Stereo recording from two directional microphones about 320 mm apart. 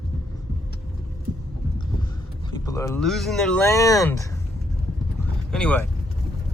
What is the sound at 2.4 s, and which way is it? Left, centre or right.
Speech, centre.